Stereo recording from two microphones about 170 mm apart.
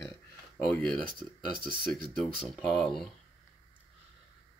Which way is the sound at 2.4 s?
5° left (ahead or behind).